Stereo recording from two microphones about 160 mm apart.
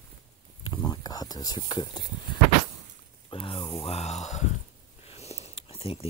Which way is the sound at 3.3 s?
30° left (ahead or behind).